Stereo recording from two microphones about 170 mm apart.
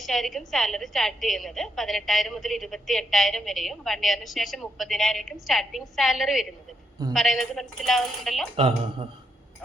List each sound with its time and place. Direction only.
0.0 s a woman's voice: centre (ahead or behind)
8.5 s speech: 30° right (ahead or behind)